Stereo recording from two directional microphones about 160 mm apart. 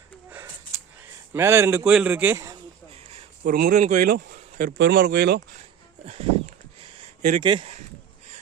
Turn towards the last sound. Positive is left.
turn(degrees=-35)  # may be behind; listen again after turning